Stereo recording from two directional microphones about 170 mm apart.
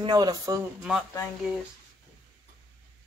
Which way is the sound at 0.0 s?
25° right (ahead or behind).